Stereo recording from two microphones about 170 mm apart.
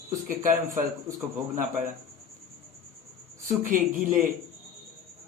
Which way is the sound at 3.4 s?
50° right (ahead or behind).